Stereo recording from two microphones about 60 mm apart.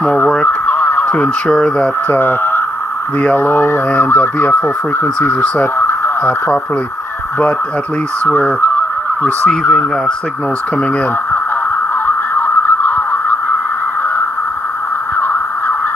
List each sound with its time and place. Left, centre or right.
0.7 s a sound: left
1.1 s speech: centre
2.0 s speech: left
3.9 s speech: left
8.3 s fowl: left
9.7 s speech: centre
12.4 s a sound: left